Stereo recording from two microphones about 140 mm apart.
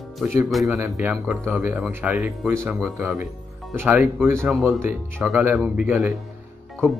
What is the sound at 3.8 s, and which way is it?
Speech, 15° right (ahead or behind).